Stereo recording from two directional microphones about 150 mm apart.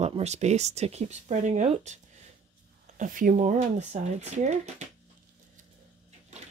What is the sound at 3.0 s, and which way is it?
Speech, 65° right (ahead or behind).